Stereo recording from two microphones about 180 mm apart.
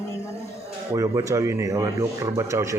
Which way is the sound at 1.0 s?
20° right (ahead or behind).